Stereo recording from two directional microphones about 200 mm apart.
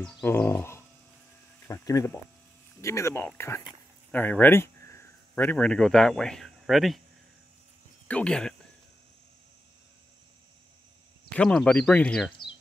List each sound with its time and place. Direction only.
0.0 s speech: 10° left (ahead or behind)
2.8 s a sound: 15° left (ahead or behind)
5.4 s speech: 5° left (ahead or behind)
8.1 s speech: 5° left (ahead or behind)
11.3 s speech: 5° left (ahead or behind)